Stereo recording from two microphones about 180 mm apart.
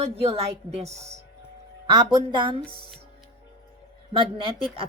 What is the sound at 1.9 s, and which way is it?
Speech, 25° right (ahead or behind).